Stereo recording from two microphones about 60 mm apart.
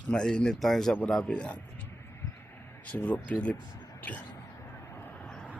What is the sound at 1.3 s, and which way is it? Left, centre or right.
Speech, centre.